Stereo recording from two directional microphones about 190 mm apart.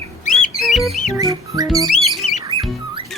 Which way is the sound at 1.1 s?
20° right (ahead or behind).